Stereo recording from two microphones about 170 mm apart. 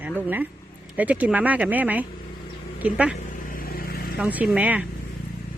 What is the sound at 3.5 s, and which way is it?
Vehicle, 60° left (ahead or behind).